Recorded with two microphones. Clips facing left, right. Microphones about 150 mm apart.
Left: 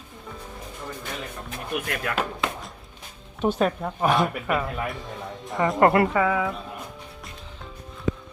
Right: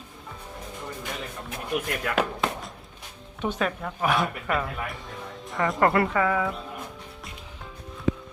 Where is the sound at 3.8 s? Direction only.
30° left (ahead or behind).